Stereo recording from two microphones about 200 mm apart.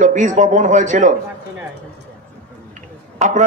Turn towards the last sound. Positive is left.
turn(degrees=-35)  # may be behind; listen again after turning